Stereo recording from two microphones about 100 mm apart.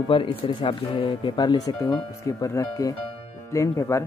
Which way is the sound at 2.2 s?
35° left (ahead or behind).